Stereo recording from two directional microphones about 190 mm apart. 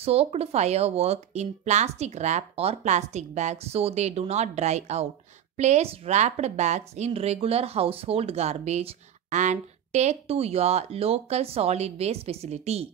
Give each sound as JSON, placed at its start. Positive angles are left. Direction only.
{"t": 0.0, "sound": "speech", "side_deg": -30}